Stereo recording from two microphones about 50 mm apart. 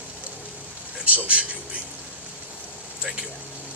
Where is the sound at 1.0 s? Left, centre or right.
Right.